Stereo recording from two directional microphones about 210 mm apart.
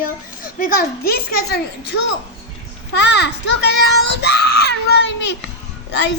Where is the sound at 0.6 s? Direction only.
50° left (ahead or behind).